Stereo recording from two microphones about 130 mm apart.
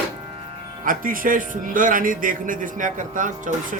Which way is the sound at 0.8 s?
90° right.